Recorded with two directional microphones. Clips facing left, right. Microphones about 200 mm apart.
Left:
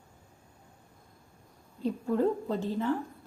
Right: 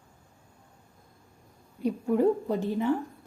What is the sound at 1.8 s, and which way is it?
A woman's voice, 15° right (ahead or behind).